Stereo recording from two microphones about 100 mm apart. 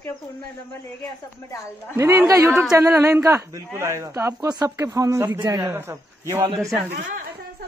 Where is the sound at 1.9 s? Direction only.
30° right (ahead or behind).